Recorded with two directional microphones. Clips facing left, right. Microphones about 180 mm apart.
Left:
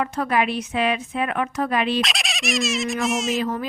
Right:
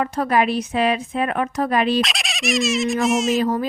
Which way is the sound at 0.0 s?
40° right (ahead or behind).